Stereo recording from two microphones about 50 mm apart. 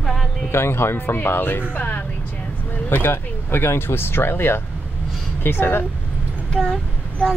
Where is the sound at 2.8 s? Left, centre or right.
Left.